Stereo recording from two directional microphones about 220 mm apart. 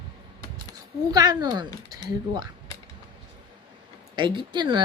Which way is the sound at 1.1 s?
15° right (ahead or behind).